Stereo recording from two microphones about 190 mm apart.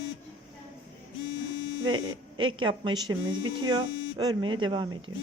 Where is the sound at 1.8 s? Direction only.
25° right (ahead or behind).